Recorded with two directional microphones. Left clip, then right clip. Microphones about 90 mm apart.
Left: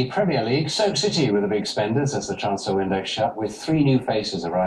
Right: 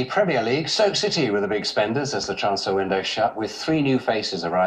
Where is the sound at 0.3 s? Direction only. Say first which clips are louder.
Right 1 dB; 40° right (ahead or behind).